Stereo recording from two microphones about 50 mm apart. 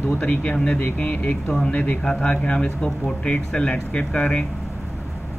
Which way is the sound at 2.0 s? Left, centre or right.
Centre.